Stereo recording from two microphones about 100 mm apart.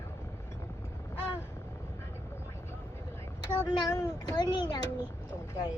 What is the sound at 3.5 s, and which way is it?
A child's voice, 35° left (ahead or behind).